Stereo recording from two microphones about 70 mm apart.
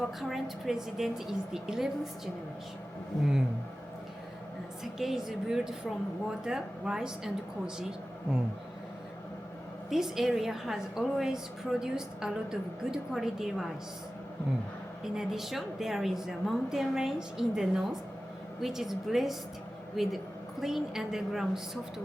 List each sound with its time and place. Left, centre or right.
0.0 s a woman's voice: centre
4.8 s a woman's voice: centre
9.9 s a woman's voice: centre
15.0 s a woman's voice: centre